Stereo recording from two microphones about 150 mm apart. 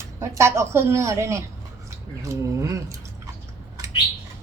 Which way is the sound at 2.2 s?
20° right (ahead or behind).